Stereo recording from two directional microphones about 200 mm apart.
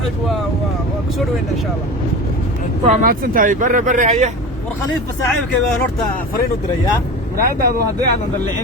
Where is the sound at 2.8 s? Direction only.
40° right (ahead or behind).